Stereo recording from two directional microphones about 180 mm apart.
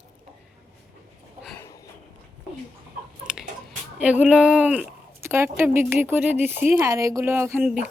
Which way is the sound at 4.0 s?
5° right (ahead or behind).